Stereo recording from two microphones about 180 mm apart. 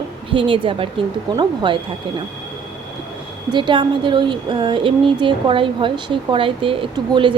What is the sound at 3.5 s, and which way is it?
Speech, 25° right (ahead or behind).